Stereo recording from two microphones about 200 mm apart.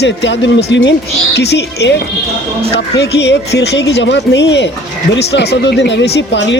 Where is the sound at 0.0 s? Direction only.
60° left (ahead or behind).